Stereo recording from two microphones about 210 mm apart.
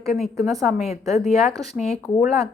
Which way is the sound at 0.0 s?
Centre (ahead or behind).